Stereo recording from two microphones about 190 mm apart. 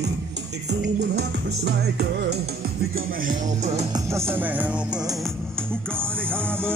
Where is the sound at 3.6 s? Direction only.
35° right (ahead or behind).